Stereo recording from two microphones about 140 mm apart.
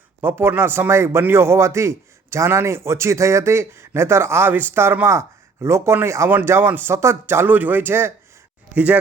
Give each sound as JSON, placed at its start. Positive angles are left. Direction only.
{"t": 0.2, "sound": "a man's voice", "side_deg": -15}